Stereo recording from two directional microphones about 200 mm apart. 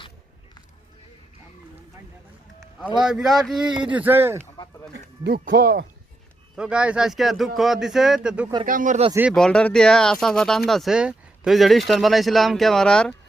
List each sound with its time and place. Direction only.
2.8 s speech: 5° right (ahead or behind)
4.5 s a sound: 20° left (ahead or behind)
5.2 s speech: 50° right (ahead or behind)
6.6 s speech: 5° right (ahead or behind)
8.6 s speech: 40° right (ahead or behind)
9.3 s speech: 5° left (ahead or behind)